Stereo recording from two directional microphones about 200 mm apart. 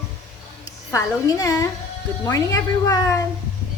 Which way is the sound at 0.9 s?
15° left (ahead or behind).